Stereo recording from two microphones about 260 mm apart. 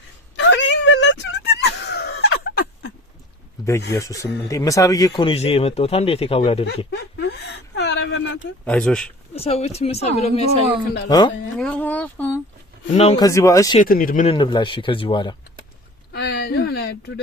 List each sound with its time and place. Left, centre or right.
0.3 s a sound: left
3.9 s speech: centre
6.9 s a sound: left
8.6 s speech: centre
9.3 s speech: left
11.5 s speech: centre
12.9 s speech: left
13.7 s speech: left
16.1 s a sound: left